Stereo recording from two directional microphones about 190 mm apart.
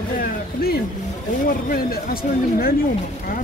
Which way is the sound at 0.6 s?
55° left (ahead or behind).